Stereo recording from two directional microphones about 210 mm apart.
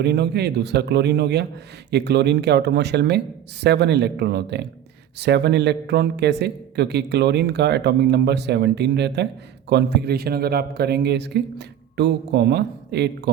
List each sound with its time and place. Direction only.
0.0 s a man's voice: 55° right (ahead or behind)